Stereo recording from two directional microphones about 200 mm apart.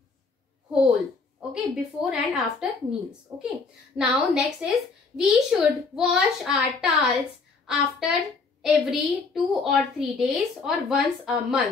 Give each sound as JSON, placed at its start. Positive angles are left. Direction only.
{"t": 1.5, "sound": "speech", "side_deg": -5}